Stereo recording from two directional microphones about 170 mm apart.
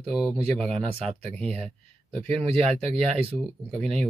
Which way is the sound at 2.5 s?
35° right (ahead or behind).